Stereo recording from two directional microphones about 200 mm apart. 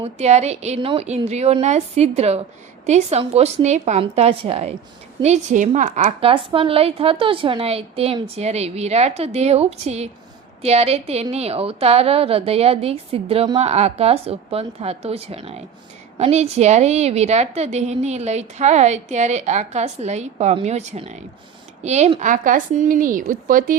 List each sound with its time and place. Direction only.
0.0 s a woman's voice: 35° right (ahead or behind)